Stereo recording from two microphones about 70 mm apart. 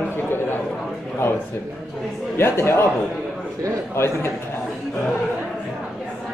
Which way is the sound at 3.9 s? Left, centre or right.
Left.